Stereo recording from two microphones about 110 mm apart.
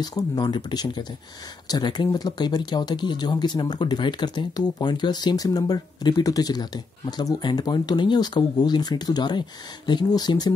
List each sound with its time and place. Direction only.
0.0 s speech: 40° left (ahead or behind)